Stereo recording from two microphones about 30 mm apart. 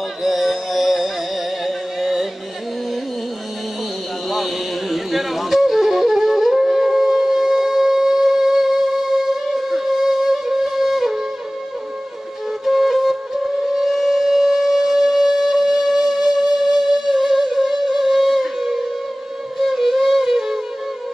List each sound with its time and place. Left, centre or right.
0.2 s music: centre
4.3 s music: centre
12.6 s music: centre